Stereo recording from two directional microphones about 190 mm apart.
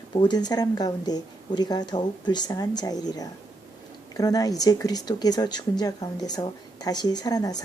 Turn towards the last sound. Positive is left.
turn(degrees=20)  # may be behind; listen again after turning